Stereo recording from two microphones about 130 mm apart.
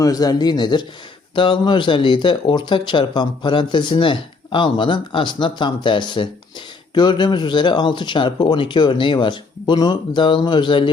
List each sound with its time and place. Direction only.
0.0 s speech: 30° left (ahead or behind)